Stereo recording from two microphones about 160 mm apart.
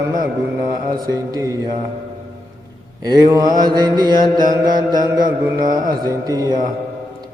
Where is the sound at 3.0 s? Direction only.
25° right (ahead or behind).